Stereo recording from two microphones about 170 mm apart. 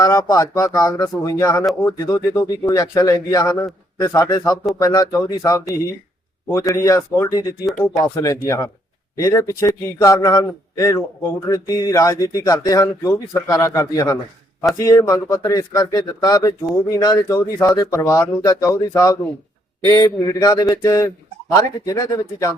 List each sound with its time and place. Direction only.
0.0 s speech: 20° left (ahead or behind)
6.7 s speech: 20° left (ahead or behind)
7.7 s speech: 5° left (ahead or behind)
8.1 s speech: 20° left (ahead or behind)